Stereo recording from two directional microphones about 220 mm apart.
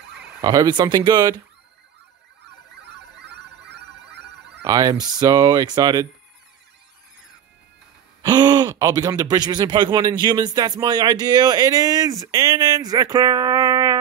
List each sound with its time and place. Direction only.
0.4 s speech: 15° right (ahead or behind)
3.3 s music: 50° right (ahead or behind)
4.6 s speech: 15° right (ahead or behind)
8.2 s speech: 20° right (ahead or behind)